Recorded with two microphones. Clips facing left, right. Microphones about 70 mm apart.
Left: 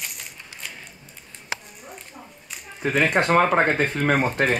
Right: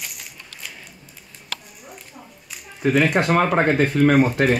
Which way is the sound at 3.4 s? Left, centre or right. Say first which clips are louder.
Right 2 dB; centre.